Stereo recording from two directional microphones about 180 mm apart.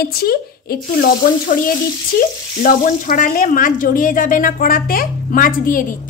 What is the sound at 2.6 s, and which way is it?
Speech, 50° left (ahead or behind).